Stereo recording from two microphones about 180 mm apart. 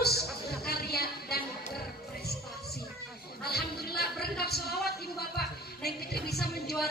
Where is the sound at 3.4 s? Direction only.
60° left (ahead or behind).